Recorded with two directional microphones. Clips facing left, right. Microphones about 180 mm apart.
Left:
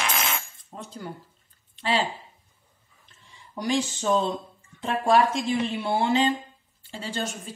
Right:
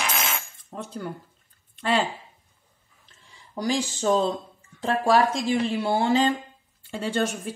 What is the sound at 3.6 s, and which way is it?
A woman's voice, 30° right (ahead or behind).